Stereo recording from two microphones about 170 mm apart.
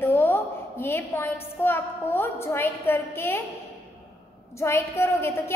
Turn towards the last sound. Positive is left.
turn(degrees=15)  # may be behind; listen again after turning